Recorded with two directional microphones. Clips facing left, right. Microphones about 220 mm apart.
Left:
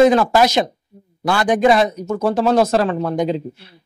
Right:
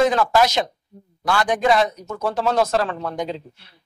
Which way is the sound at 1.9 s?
25° left (ahead or behind).